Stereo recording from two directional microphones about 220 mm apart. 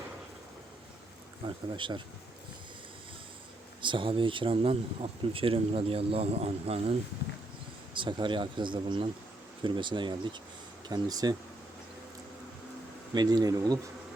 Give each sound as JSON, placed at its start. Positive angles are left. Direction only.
{"t": 1.5, "sound": "speech", "side_deg": -20}
{"t": 3.8, "sound": "speech", "side_deg": -20}
{"t": 7.9, "sound": "speech", "side_deg": -20}
{"t": 13.1, "sound": "speech", "side_deg": -15}